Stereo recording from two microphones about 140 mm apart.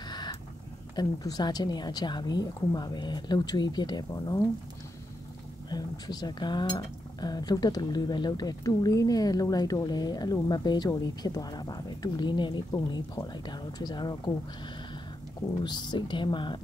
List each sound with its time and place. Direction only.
0.1 s vehicle: 30° left (ahead or behind)
0.9 s speech: 30° left (ahead or behind)
5.7 s speech: 30° left (ahead or behind)
15.6 s speech: 30° left (ahead or behind)